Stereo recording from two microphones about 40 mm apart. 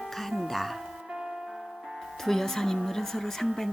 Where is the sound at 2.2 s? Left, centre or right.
Centre.